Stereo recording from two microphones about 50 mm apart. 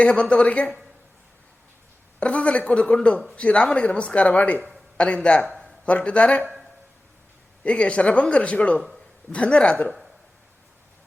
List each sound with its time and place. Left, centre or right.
0.0 s speech: left
2.1 s a man's voice: left
7.6 s speech: left